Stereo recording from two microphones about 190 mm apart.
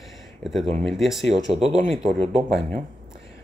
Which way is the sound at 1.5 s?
30° right (ahead or behind).